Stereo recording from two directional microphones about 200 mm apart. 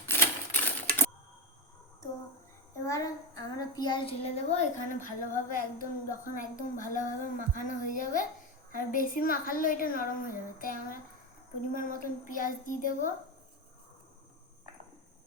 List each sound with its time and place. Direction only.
0.1 s typewriter: 10° left (ahead or behind)
2.8 s child singing: 15° left (ahead or behind); by 13.1 s 40° left (ahead or behind)